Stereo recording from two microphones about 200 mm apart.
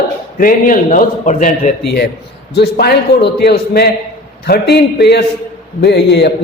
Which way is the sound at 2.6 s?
55° left (ahead or behind).